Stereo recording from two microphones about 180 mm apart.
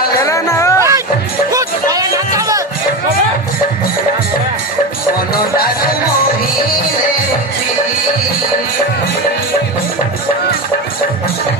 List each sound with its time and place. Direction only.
0.3 s music: 15° left (ahead or behind)
0.8 s music: 15° right (ahead or behind)
5.5 s music: 55° left (ahead or behind)